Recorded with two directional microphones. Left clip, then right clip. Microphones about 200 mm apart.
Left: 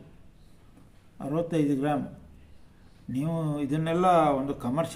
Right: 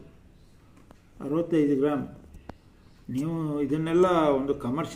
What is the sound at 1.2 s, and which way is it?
Speech, 50° left (ahead or behind).